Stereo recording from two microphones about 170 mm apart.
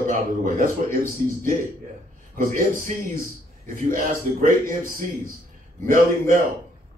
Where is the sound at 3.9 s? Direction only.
50° right (ahead or behind).